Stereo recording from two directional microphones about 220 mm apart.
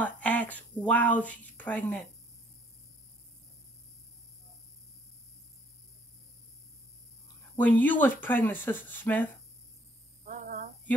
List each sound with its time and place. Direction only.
0.0 s speech: 5° left (ahead or behind)
7.5 s speech: 5° left (ahead or behind)
10.2 s a sound: 40° right (ahead or behind)